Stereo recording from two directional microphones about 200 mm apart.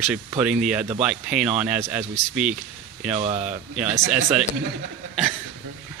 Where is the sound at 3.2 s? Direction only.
35° right (ahead or behind).